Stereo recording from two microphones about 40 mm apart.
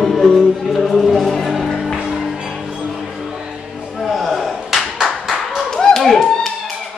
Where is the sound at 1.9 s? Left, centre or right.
Centre.